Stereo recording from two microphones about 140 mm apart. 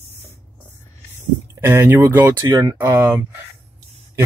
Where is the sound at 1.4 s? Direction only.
20° right (ahead or behind).